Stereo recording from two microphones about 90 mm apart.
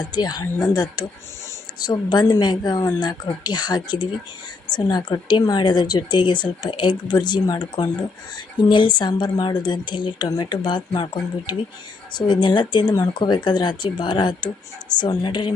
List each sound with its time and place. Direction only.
0.1 s speech: 50° left (ahead or behind)
8.7 s speech: 60° left (ahead or behind)
10.2 s speech: 50° left (ahead or behind)